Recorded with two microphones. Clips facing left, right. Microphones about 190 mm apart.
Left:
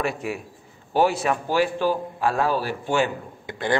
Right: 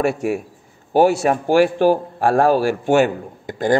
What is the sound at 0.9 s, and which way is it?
Speech, 45° right (ahead or behind).